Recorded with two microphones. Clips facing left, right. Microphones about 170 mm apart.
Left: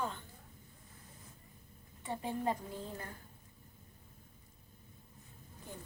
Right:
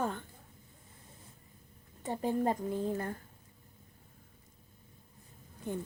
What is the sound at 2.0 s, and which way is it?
Speech, 45° right (ahead or behind).